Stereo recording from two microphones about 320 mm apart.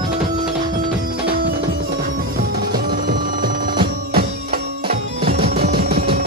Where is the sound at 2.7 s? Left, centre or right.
Right.